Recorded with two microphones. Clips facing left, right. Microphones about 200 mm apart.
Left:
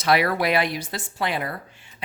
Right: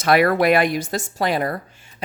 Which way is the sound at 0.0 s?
50° right (ahead or behind).